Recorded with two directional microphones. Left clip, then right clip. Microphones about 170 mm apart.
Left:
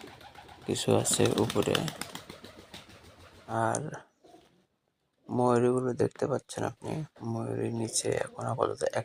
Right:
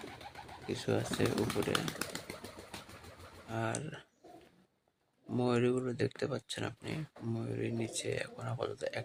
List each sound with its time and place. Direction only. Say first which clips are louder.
0.7 s speech: left 8 dB; 40° left (ahead or behind)
3.5 s speech: left 8 dB; 15° left (ahead or behind)
5.4 s speech: left 7 dB; 10° left (ahead or behind)
5.7 s speech: left 6 dB; 5° right (ahead or behind)
6.0 s speech: left 7 dB; 15° left (ahead or behind)